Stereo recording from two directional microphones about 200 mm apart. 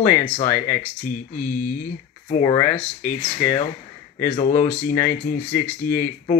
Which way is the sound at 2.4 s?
10° left (ahead or behind).